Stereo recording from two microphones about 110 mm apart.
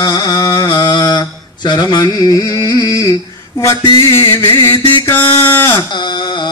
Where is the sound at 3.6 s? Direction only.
30° left (ahead or behind).